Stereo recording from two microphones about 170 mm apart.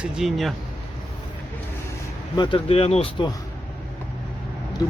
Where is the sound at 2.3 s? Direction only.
30° left (ahead or behind).